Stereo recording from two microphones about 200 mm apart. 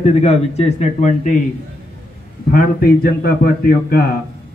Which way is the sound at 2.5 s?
50° left (ahead or behind).